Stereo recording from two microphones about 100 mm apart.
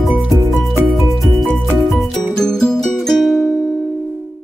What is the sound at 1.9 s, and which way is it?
Music, 5° left (ahead or behind).